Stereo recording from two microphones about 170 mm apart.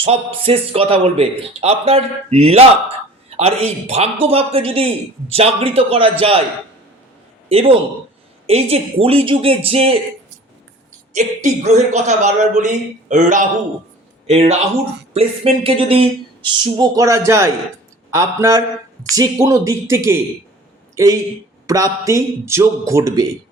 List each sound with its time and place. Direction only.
0.0 s a man's voice: 35° right (ahead or behind)
7.4 s a man's voice: 35° right (ahead or behind)
11.4 s a man's voice: 45° right (ahead or behind); by 23.2 s 20° right (ahead or behind)